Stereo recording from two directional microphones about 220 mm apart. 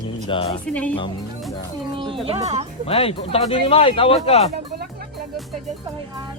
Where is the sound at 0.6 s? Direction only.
5° left (ahead or behind).